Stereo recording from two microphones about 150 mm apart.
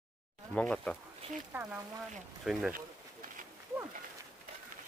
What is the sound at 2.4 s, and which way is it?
Speech, 5° right (ahead or behind).